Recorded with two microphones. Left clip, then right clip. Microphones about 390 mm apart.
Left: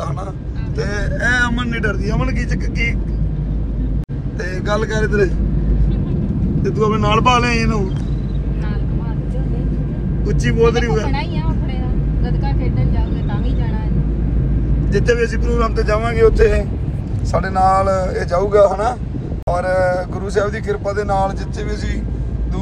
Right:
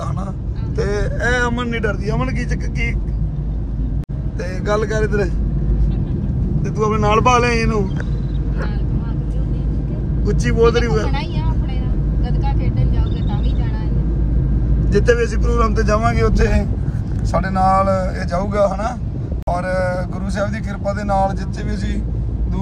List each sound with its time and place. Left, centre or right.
0.7 s speech: centre
4.6 s speech: centre
6.6 s speech: centre
10.2 s speech: centre
14.9 s speech: centre